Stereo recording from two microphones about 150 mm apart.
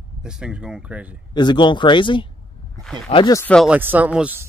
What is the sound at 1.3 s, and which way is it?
Speech, 30° left (ahead or behind).